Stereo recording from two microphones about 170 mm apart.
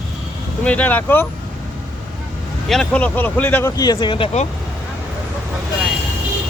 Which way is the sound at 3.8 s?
25° left (ahead or behind).